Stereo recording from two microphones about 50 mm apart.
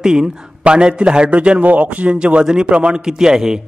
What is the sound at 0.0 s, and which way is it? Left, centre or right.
A man's voice, centre.